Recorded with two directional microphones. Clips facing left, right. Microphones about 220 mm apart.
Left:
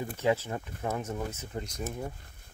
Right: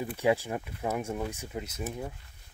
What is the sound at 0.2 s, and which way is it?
Speech, 15° right (ahead or behind).